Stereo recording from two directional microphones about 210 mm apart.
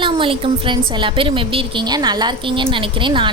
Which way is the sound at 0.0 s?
25° right (ahead or behind).